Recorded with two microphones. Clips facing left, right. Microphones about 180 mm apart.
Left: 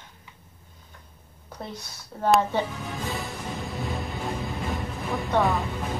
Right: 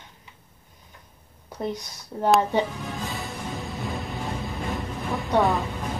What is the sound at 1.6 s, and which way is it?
Speech, 15° right (ahead or behind).